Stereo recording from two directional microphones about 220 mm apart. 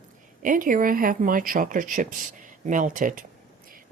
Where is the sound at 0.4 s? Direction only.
40° right (ahead or behind).